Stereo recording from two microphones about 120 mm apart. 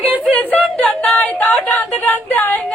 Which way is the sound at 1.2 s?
15° left (ahead or behind).